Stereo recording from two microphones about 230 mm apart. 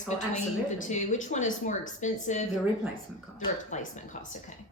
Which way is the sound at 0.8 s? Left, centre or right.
Left.